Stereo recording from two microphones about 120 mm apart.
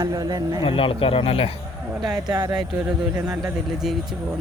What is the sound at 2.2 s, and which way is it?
Speech, 35° right (ahead or behind).